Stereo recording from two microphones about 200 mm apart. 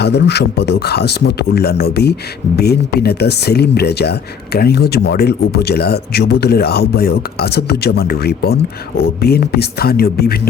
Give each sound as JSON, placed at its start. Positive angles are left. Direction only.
{"t": 0.0, "sound": "a man's voice", "side_deg": 55}